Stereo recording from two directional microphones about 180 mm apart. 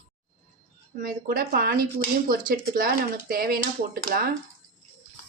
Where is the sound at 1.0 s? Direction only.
50° right (ahead or behind).